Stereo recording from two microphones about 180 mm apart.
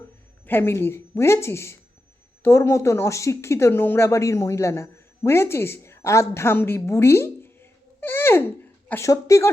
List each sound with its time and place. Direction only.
0.4 s a woman's voice: 10° left (ahead or behind)